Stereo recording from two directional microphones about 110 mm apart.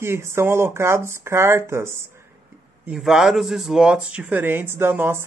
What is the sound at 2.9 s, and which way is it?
Speech, 5° right (ahead or behind).